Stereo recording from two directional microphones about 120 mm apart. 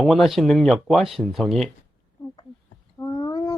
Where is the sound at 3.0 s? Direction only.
30° left (ahead or behind).